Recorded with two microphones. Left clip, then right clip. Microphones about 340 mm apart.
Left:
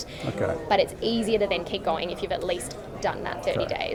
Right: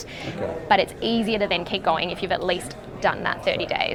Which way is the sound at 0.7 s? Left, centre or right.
Right.